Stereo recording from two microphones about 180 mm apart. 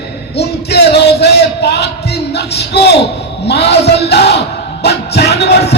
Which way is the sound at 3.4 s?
65° left (ahead or behind).